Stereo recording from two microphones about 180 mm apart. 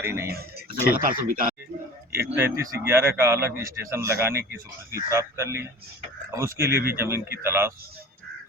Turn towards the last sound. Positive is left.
turn(degrees=-15)  # may be behind; listen again after turning